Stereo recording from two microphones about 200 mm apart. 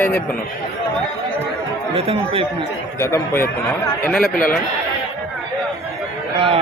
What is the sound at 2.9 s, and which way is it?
Speech, 15° left (ahead or behind).